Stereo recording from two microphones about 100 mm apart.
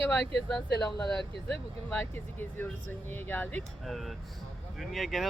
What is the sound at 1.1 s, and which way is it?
Speech, 10° left (ahead or behind).